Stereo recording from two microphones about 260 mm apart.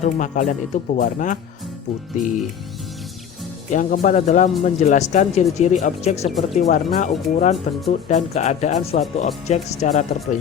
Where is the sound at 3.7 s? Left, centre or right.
Left.